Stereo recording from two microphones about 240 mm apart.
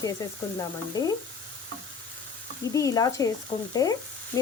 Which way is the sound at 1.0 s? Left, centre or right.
Centre.